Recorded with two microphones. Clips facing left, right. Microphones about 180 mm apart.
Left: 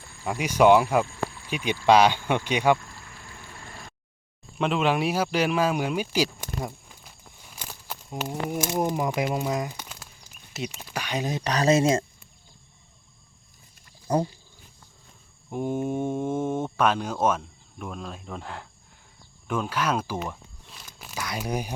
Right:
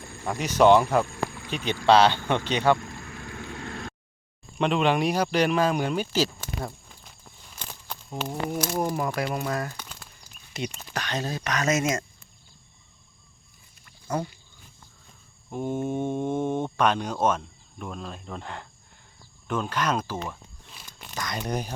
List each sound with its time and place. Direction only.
0.3 s speech: 10° left (ahead or behind)
3.3 s vehicle: 75° right (ahead or behind)
4.5 s speech: 5° left (ahead or behind)
7.5 s a sound: 10° left (ahead or behind)
8.6 s speech: 20° left (ahead or behind)
11.4 s speech: 30° left (ahead or behind)
14.1 s speech: 35° left (ahead or behind)
15.4 s speech: 10° left (ahead or behind)